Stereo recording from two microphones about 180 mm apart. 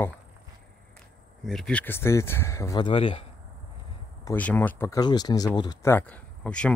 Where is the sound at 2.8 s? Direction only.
30° left (ahead or behind).